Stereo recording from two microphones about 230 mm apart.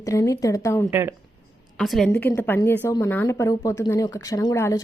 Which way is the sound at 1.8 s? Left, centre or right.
Centre.